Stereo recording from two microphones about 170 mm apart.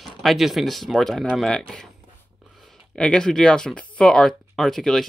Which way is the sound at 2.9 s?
5° left (ahead or behind).